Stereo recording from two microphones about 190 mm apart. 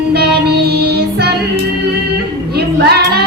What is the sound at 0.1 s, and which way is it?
Music, 55° right (ahead or behind).